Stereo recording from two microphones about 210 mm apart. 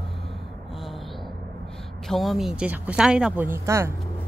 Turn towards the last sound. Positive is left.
turn(degrees=-15)  # may be behind; listen again after turning